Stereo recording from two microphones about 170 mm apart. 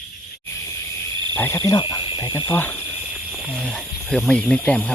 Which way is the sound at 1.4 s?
15° left (ahead or behind).